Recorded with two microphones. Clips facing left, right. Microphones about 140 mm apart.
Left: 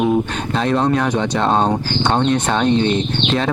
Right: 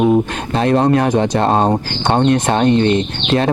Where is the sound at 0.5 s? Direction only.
50° right (ahead or behind).